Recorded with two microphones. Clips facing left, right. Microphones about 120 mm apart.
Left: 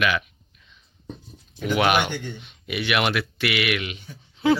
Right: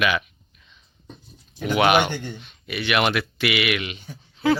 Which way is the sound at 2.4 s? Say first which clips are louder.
Left 1 dB; 15° left (ahead or behind).